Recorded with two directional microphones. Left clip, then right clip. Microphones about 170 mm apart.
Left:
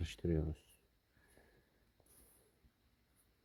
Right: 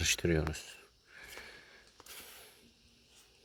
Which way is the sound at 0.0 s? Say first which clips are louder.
Right 10 dB; 10° left (ahead or behind).